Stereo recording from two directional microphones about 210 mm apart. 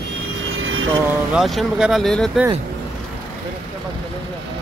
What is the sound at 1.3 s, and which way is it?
Speech, centre (ahead or behind).